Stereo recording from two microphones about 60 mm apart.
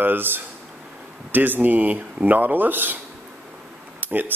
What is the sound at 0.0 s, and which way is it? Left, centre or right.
Speech, right.